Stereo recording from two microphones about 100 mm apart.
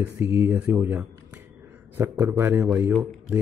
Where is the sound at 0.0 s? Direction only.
20° right (ahead or behind).